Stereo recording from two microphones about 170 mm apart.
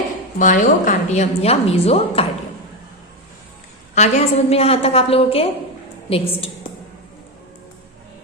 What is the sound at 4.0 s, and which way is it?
A woman's voice, 40° left (ahead or behind).